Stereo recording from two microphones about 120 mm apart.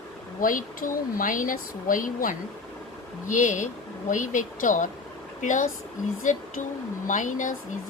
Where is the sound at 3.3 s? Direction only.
90° left.